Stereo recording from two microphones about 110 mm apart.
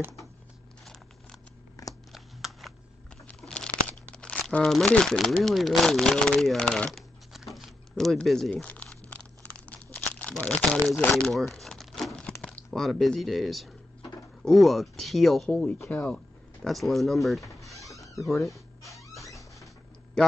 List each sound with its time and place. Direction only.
1.8 s a sound: 30° left (ahead or behind)
2.1 s a sound: centre (ahead or behind)
3.3 s crumpling: 5° left (ahead or behind)
14.4 s speech: centre (ahead or behind)
15.5 s speech: 15° left (ahead or behind)
16.6 s speech: centre (ahead or behind)